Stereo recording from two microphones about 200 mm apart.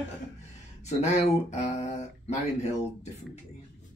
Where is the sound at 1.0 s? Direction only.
35° left (ahead or behind).